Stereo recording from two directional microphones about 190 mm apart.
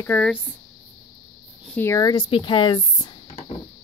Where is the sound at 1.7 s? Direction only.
15° left (ahead or behind).